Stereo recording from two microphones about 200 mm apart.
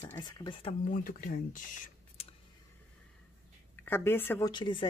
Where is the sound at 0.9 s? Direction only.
45° left (ahead or behind).